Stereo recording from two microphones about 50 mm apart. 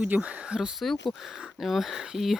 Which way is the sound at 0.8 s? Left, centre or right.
Centre.